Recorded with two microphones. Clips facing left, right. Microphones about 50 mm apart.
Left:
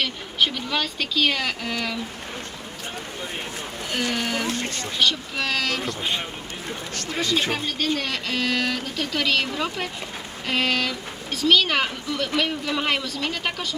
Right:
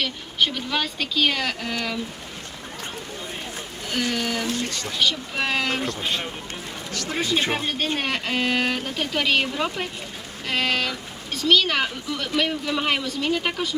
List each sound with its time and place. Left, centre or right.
0.0 s speech: centre
4.1 s speech: centre
4.4 s speech: left
5.4 s speech: right
5.8 s speech: centre
7.1 s speech: right; by 13.7 s centre